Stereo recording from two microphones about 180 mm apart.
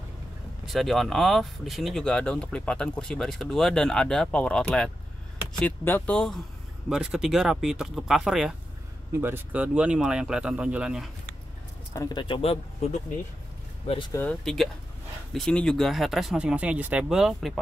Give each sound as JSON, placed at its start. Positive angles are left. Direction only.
{"t": 0.7, "sound": "speech", "side_deg": 0}
{"t": 11.9, "sound": "speech", "side_deg": 20}
{"t": 14.4, "sound": "speech", "side_deg": 0}